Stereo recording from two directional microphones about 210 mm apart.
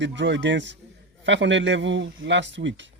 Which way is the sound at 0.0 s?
60° right (ahead or behind).